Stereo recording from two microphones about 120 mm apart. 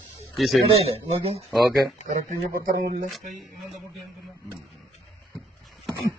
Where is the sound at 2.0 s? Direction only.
90° right.